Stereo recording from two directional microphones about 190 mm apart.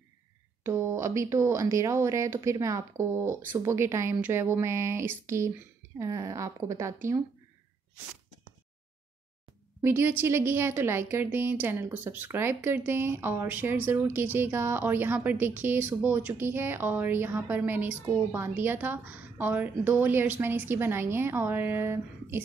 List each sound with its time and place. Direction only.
0.7 s a woman's voice: 15° right (ahead or behind)
9.8 s a woman's voice: 15° right (ahead or behind)